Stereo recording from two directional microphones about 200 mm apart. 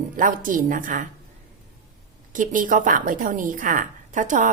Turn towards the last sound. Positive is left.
turn(degrees=-40)  # may be behind; listen again after turning